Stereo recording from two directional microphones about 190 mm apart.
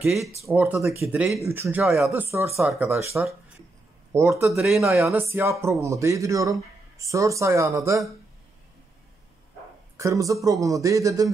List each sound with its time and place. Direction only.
0.0 s speech: centre (ahead or behind)
0.5 s speech: 10° right (ahead or behind)
2.3 s speech: 15° right (ahead or behind)
4.5 s speech: centre (ahead or behind)
5.3 s speech: 15° right (ahead or behind)
9.9 s speech: 15° right (ahead or behind)